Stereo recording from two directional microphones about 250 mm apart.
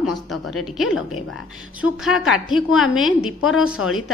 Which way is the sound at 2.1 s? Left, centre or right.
Left.